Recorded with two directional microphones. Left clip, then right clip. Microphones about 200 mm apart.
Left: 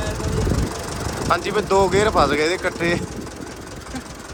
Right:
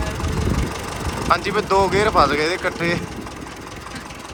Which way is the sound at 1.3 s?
15° left (ahead or behind).